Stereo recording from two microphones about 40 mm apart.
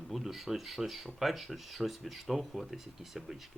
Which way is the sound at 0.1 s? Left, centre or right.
Centre.